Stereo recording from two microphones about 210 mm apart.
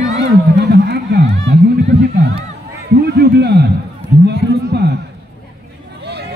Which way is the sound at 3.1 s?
50° right (ahead or behind).